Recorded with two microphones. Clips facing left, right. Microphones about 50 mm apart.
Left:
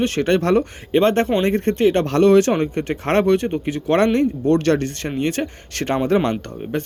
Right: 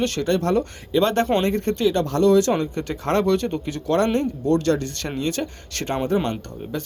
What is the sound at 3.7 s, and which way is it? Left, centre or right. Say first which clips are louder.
Speech: left 3 dB; left.